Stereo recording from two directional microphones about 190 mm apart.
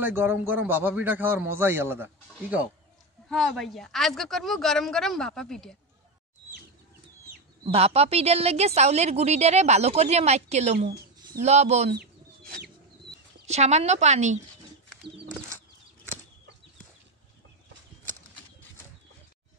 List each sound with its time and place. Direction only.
0.0 s a man's voice: 10° right (ahead or behind)
3.3 s a woman's voice: centre (ahead or behind)
7.6 s a woman's voice: 30° right (ahead or behind)
11.1 s bird: 20° right (ahead or behind)
11.4 s a woman's voice: 35° right (ahead or behind)
11.9 s chicken: 55° right (ahead or behind)
13.5 s a woman's voice: 35° right (ahead or behind)